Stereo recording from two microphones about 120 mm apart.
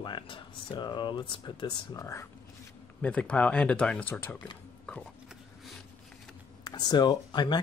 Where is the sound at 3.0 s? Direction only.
10° left (ahead or behind).